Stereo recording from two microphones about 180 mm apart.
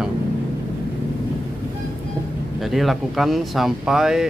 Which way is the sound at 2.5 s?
Centre (ahead or behind).